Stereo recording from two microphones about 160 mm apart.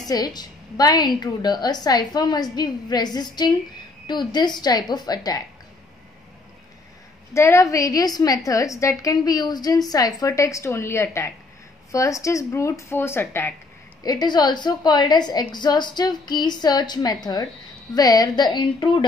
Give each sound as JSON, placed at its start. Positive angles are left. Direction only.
{"t": 0.0, "sound": "a woman's voice", "side_deg": 25}
{"t": 7.3, "sound": "a woman's voice", "side_deg": 15}
{"t": 14.0, "sound": "a woman's voice", "side_deg": 25}